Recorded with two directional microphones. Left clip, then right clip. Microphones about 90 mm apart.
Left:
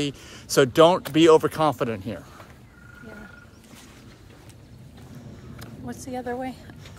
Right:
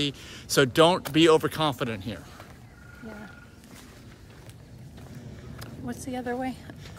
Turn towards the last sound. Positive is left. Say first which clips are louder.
# left 1 dB
turn(degrees=-25)  # may be behind; listen again after turning